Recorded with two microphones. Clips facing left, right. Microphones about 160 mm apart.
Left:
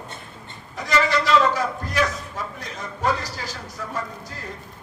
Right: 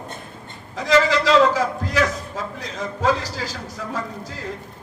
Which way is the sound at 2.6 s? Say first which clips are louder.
Right 4 dB; 90° right.